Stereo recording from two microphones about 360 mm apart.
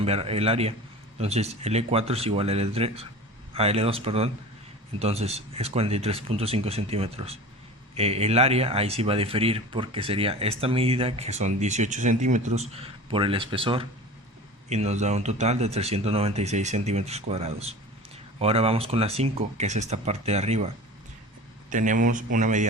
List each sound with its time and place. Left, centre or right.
0.0 s speech: centre
21.7 s speech: right